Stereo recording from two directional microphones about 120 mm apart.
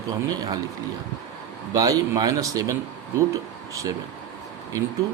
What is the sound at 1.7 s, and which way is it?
A man's voice, 30° right (ahead or behind).